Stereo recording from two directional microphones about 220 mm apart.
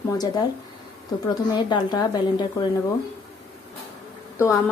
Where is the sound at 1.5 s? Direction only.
20° left (ahead or behind).